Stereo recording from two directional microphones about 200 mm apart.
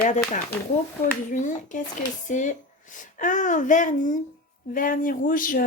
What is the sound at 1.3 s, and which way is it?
A child's voice, 40° left (ahead or behind).